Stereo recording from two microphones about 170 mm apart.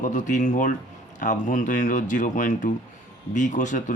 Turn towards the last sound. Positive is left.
turn(degrees=45)  # may be behind; listen again after turning